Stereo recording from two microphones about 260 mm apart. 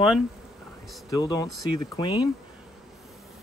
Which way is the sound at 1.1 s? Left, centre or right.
Centre.